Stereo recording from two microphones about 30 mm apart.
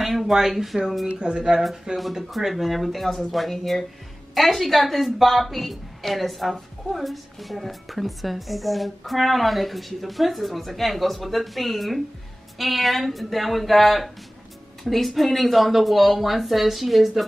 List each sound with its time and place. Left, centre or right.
0.4 s speech: centre
1.2 s speech: right
2.3 s a woman's voice: centre
3.5 s a woman's voice: centre